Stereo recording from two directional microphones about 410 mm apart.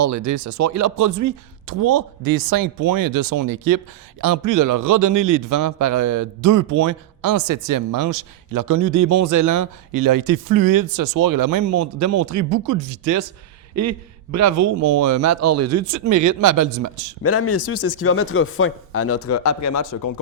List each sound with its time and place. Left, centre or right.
0.3 s a man's voice: right
17.2 s speech: left